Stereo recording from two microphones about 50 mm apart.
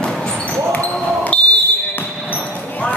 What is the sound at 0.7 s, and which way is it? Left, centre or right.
Basketball bounce, left.